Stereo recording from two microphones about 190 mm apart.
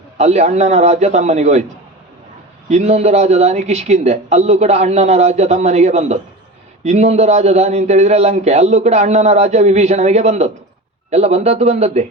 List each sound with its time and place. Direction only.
0.2 s a man's voice: 35° right (ahead or behind)
2.6 s a man's voice: 35° right (ahead or behind)